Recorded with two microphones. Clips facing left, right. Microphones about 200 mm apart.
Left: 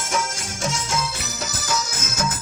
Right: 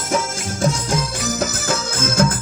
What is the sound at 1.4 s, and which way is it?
Music, 55° right (ahead or behind).